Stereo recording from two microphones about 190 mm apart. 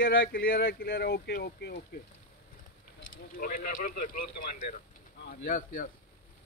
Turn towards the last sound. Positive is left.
turn(degrees=45)  # may be behind; listen again after turning